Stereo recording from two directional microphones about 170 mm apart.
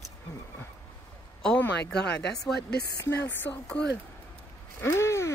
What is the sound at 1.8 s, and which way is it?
Speech, 80° left.